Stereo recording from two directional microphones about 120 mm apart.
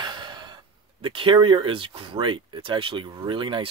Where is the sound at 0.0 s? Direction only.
40° right (ahead or behind).